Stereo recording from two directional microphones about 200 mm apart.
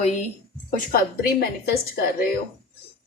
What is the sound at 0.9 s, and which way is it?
A woman's voice, 50° left (ahead or behind).